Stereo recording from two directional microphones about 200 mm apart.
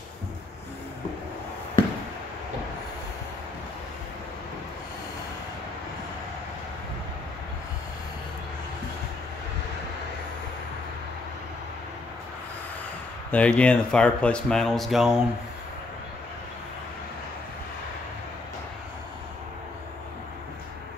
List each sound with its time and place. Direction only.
13.3 s speech: 5° left (ahead or behind)